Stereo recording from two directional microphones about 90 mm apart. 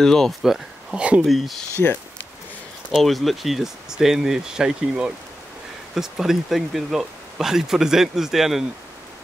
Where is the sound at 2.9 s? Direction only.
Centre (ahead or behind).